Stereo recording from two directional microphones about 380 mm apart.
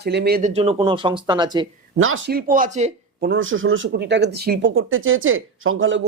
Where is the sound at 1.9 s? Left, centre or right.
Right.